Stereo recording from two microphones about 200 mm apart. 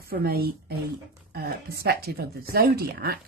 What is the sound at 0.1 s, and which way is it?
Speech, 50° right (ahead or behind).